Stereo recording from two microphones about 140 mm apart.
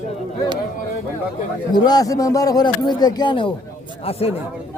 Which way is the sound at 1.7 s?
30° left (ahead or behind).